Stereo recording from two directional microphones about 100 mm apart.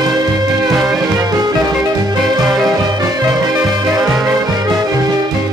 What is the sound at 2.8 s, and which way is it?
Music, 40° right (ahead or behind).